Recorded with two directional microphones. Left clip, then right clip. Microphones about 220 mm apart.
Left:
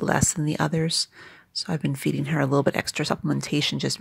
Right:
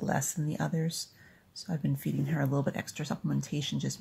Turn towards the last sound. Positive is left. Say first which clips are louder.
# left 11 dB
turn(degrees=40)  # may be behind; listen again after turning